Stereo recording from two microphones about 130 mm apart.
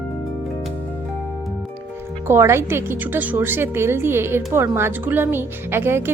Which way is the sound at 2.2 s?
20° right (ahead or behind).